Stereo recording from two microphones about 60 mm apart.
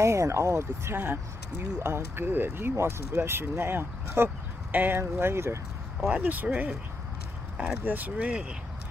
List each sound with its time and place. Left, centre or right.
0.0 s speech: right
0.9 s speech: right
6.0 s speech: right
7.5 s speech: centre
7.8 s speech: right